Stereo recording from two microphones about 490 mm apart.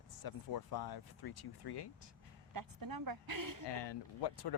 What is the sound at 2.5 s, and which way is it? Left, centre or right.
A woman's voice, right.